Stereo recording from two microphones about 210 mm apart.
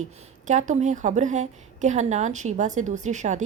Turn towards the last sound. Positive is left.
turn(degrees=-35)  # may be behind; listen again after turning